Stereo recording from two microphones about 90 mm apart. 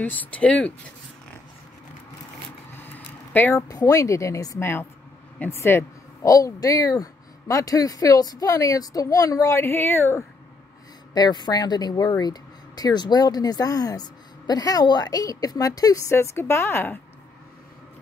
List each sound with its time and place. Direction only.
0.0 s speech: 20° left (ahead or behind)
2.7 s a sound: 25° left (ahead or behind)
3.5 s speech: 40° left (ahead or behind)
5.4 s speech: 25° left (ahead or behind)
6.2 s speech: 40° left (ahead or behind)
11.1 s speech: 50° left (ahead or behind); by 17.0 s 25° left (ahead or behind)